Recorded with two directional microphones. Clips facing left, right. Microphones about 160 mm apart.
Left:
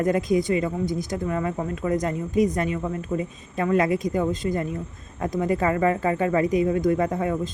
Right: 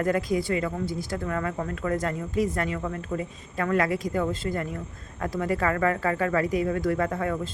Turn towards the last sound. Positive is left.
turn(degrees=20)  # may be behind; listen again after turning